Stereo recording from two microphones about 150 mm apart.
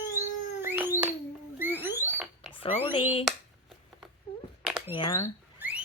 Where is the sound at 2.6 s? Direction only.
35° left (ahead or behind).